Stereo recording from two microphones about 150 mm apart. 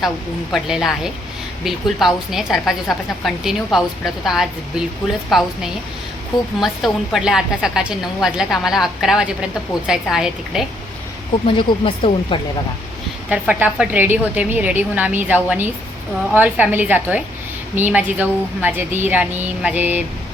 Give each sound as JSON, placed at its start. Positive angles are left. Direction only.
{"t": 0.5, "sound": "a woman's voice", "side_deg": 0}
{"t": 11.4, "sound": "speech", "side_deg": 40}
{"t": 13.5, "sound": "a woman's voice", "side_deg": -10}